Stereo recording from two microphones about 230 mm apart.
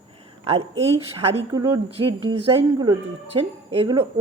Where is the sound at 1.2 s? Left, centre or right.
Right.